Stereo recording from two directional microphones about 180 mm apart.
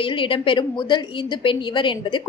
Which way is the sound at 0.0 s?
30° left (ahead or behind).